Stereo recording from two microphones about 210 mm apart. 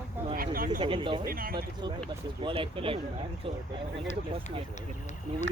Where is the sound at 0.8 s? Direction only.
25° right (ahead or behind).